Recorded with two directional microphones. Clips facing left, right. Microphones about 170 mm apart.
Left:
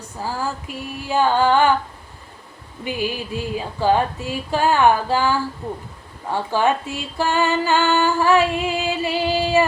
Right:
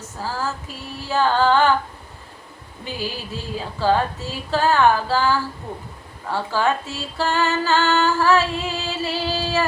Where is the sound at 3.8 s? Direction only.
15° left (ahead or behind).